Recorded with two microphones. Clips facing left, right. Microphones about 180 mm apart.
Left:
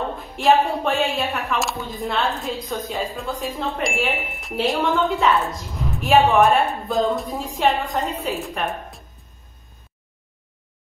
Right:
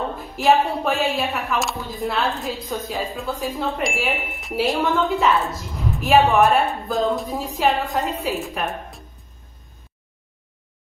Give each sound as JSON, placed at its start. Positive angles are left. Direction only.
{"t": 0.4, "sound": "speech", "side_deg": 0}